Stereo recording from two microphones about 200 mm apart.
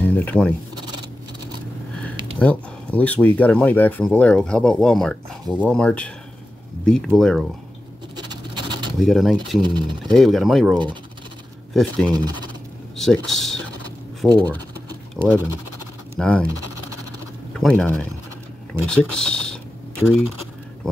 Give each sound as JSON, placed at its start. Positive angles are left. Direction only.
{"t": 0.0, "sound": "sheep", "side_deg": 10}
{"t": 0.7, "sound": "a sound", "side_deg": -25}
{"t": 2.3, "sound": "speech", "side_deg": 5}
{"t": 7.2, "sound": "speech", "side_deg": 0}
{"t": 8.2, "sound": "a sound", "side_deg": -20}
{"t": 9.0, "sound": "speech", "side_deg": 0}
{"t": 9.6, "sound": "speech", "side_deg": -20}
{"t": 10.1, "sound": "speech", "side_deg": 0}
{"t": 12.1, "sound": "speech", "side_deg": -20}
{"t": 12.9, "sound": "speech", "side_deg": 0}
{"t": 15.2, "sound": "speech", "side_deg": -10}
{"t": 16.2, "sound": "speech", "side_deg": 5}
{"t": 17.6, "sound": "speech", "side_deg": 5}